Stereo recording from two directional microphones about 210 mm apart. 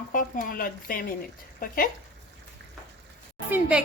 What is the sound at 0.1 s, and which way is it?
Speech, 40° left (ahead or behind).